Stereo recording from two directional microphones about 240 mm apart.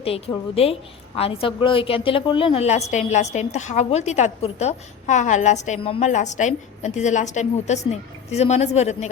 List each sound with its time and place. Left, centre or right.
0.0 s a woman's voice: left